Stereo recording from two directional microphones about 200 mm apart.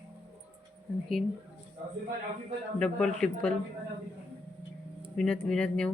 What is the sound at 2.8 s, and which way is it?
Speech, 5° left (ahead or behind).